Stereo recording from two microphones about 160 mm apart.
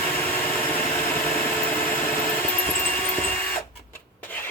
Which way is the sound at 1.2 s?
10° left (ahead or behind).